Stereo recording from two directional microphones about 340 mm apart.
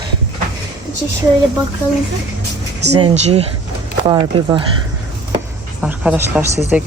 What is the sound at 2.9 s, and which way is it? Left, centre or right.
Speech, centre.